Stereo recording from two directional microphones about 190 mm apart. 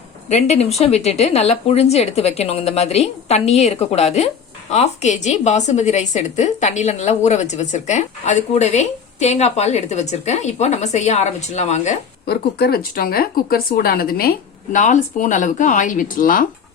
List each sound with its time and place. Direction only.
0.3 s a woman's voice: 35° left (ahead or behind)
12.2 s speech: 60° left (ahead or behind)